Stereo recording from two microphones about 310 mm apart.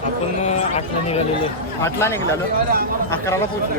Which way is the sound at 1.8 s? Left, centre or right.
Centre.